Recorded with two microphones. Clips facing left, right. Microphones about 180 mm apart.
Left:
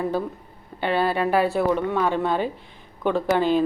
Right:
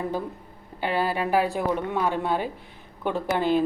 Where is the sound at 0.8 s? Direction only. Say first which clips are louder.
Left 3 dB; 10° right (ahead or behind).